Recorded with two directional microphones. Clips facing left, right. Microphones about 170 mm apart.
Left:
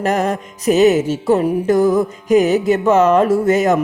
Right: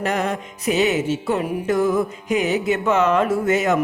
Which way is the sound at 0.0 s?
40° left (ahead or behind).